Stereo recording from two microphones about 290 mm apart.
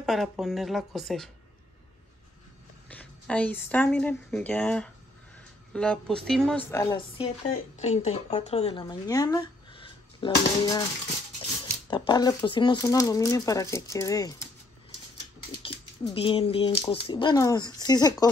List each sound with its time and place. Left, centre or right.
0.0 s speech: centre
2.9 s a woman's voice: centre
11.9 s a woman's voice: centre
15.7 s rodents: left
16.1 s a woman's voice: centre